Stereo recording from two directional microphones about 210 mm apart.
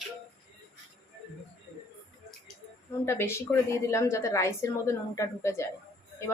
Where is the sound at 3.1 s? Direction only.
10° left (ahead or behind).